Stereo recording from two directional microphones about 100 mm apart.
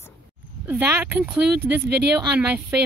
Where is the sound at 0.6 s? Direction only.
20° right (ahead or behind).